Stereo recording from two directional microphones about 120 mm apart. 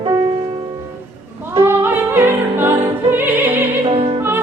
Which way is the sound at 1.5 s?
20° right (ahead or behind).